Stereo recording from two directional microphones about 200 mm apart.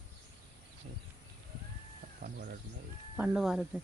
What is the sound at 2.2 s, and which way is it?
Bird, 55° right (ahead or behind).